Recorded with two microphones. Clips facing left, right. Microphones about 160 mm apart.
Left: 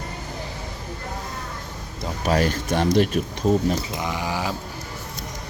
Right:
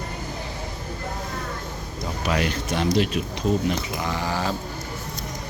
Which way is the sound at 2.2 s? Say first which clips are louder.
Left 4 dB; 40° left (ahead or behind).